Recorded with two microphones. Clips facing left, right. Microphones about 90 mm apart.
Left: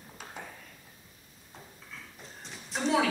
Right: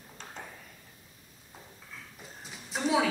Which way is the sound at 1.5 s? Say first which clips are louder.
Left 1 dB; 5° right (ahead or behind).